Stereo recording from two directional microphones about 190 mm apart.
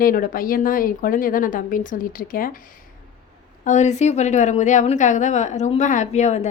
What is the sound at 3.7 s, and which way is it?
A woman's voice, 40° left (ahead or behind).